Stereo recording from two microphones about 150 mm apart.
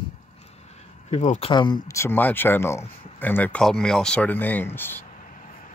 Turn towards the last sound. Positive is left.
turn(degrees=15)  # may be behind; listen again after turning